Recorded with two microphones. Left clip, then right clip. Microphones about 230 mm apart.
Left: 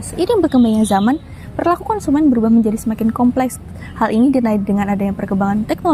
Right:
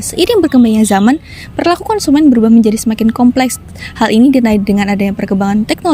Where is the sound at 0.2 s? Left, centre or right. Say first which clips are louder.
Right 5 dB; right.